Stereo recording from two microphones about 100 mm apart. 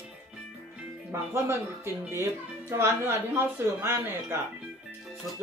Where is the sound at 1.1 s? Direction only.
25° right (ahead or behind).